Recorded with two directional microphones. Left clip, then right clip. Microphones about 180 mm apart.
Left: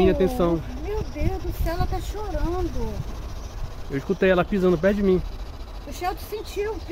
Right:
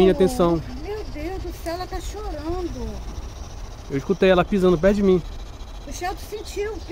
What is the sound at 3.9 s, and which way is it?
Speech, 20° right (ahead or behind).